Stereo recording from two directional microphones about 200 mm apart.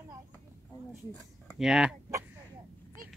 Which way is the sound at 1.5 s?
5° right (ahead or behind).